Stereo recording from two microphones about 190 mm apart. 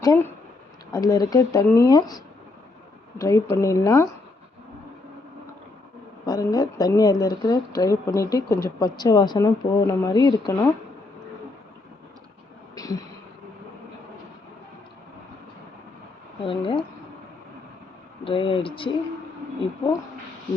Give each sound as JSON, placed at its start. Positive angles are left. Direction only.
{"t": 0.0, "sound": "speech", "side_deg": 20}
{"t": 6.2, "sound": "speech", "side_deg": 20}
{"t": 12.7, "sound": "a sound", "side_deg": 20}
{"t": 16.4, "sound": "speech", "side_deg": 25}
{"t": 18.3, "sound": "speech", "side_deg": 25}